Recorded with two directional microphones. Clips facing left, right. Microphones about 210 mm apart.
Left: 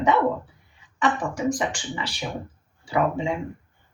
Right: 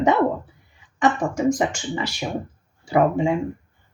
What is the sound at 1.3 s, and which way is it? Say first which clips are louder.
Speech: right 4 dB; 40° right (ahead or behind).